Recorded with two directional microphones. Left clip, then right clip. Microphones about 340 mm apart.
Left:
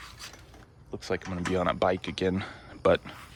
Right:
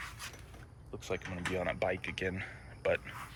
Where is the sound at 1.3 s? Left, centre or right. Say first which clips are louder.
Left 8 dB; left.